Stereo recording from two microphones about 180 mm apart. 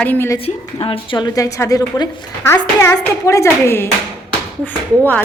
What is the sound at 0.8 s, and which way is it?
A woman's voice, 30° left (ahead or behind).